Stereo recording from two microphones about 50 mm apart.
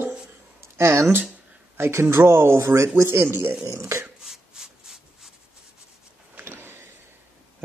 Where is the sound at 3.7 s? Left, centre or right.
Right.